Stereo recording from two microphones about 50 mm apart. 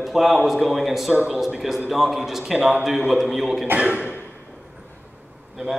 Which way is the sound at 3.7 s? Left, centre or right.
Right.